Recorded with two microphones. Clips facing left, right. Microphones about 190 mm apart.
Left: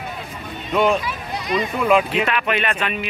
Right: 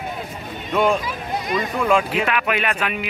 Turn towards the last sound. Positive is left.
turn(degrees=-10)  # may be behind; listen again after turning